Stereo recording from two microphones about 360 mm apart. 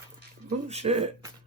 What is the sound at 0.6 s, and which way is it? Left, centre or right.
Speech, centre.